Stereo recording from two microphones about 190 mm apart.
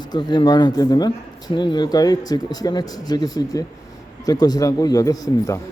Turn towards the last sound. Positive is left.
turn(degrees=20)  # may be behind; listen again after turning